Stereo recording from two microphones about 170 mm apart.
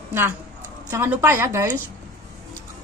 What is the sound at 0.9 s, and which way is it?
Speech, 15° right (ahead or behind).